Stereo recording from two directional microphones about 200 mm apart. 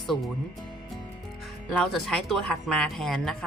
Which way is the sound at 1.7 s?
Centre (ahead or behind).